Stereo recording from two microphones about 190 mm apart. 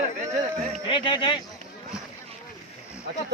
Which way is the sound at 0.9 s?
25° left (ahead or behind).